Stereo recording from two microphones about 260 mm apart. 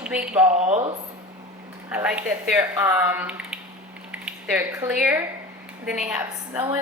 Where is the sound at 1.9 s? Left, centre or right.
Centre.